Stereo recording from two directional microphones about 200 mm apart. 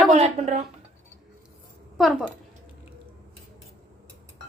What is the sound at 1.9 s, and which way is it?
Speech, centre (ahead or behind).